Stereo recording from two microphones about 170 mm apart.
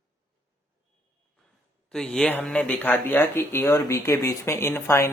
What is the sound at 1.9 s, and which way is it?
A woman's voice, 5° left (ahead or behind).